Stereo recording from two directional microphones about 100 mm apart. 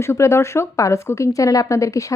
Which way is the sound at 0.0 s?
25° left (ahead or behind).